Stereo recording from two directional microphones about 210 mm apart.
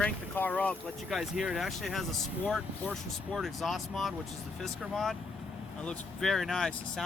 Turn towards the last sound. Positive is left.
turn(degrees=0)  # may be behind; listen again after turning